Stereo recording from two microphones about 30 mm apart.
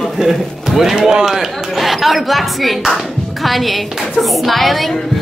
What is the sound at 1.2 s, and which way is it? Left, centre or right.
Speech, centre.